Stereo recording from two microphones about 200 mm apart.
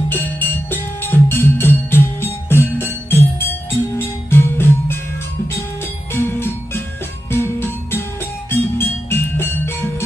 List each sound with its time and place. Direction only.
0.1 s music: 10° left (ahead or behind)
6.1 s music: 10° left (ahead or behind)